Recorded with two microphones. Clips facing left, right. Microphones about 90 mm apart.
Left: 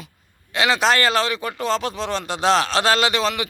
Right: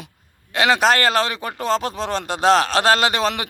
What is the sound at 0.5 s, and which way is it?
Speech, 45° right (ahead or behind).